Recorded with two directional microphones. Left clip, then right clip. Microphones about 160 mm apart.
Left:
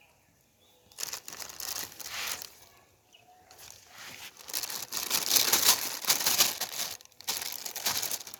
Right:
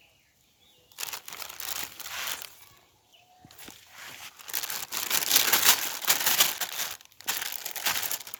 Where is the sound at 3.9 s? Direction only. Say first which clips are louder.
Right 1 dB; 20° right (ahead or behind).